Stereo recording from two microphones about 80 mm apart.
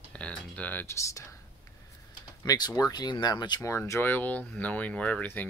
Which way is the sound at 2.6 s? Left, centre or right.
Left.